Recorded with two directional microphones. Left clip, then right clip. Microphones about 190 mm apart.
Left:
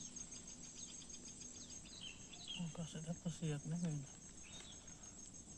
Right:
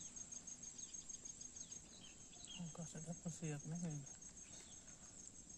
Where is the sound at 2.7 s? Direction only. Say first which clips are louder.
Left 3 dB; 15° right (ahead or behind).